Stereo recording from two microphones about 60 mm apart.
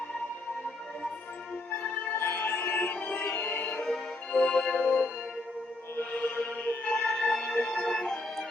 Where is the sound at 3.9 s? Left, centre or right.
Centre.